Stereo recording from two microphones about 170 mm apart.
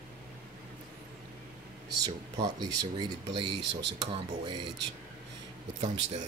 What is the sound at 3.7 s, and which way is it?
Speech, 90° right.